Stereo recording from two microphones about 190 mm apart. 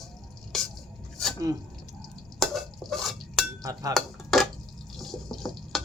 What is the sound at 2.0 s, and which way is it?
Stir, centre (ahead or behind).